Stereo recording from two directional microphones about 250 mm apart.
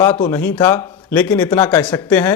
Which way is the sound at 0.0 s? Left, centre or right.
Centre.